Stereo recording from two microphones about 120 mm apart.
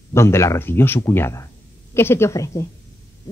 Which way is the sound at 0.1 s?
20° left (ahead or behind).